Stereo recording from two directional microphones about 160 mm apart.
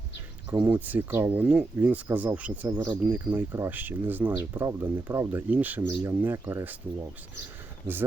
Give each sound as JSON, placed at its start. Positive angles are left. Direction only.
{"t": 0.5, "sound": "speech", "side_deg": -10}